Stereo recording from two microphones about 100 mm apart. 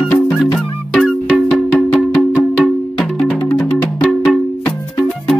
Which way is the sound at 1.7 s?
20° left (ahead or behind).